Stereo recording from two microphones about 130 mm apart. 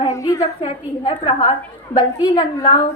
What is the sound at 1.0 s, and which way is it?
A woman's voice, 40° left (ahead or behind).